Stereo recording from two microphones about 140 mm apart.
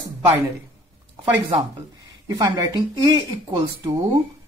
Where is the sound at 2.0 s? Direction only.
30° right (ahead or behind).